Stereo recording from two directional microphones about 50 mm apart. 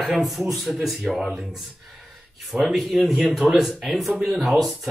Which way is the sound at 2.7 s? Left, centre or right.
Centre.